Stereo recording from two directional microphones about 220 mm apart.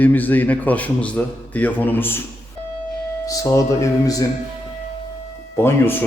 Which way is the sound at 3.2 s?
15° left (ahead or behind).